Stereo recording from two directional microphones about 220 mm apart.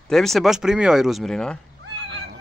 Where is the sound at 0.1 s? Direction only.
Centre (ahead or behind).